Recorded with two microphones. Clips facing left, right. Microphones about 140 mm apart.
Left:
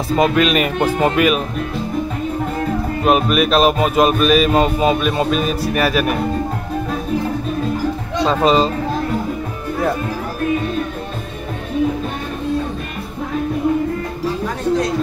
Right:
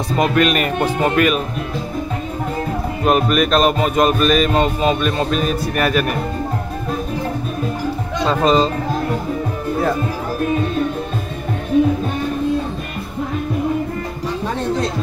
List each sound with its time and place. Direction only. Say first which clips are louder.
0.2 s music: left 1 dB; centre (ahead or behind)
3.1 s music: even; 5° left (ahead or behind)
8.3 s speech: even; 5° left (ahead or behind)